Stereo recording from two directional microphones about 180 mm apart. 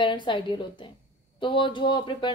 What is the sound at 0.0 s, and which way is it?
Speech, 25° left (ahead or behind).